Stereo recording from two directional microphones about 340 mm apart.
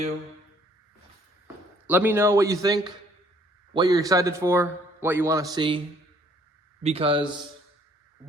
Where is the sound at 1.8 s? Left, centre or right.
Centre.